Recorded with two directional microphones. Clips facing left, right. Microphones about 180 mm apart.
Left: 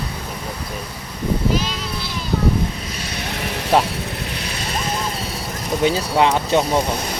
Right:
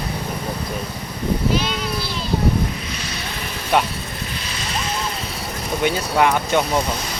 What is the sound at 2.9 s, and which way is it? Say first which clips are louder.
Vehicle: left 2 dB; 55° left (ahead or behind).